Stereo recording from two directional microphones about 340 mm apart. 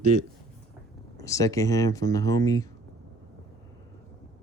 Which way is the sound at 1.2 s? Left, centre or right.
Centre.